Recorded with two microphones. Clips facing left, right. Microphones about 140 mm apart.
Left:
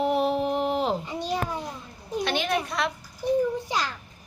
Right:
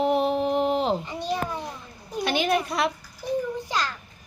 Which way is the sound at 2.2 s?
5° right (ahead or behind).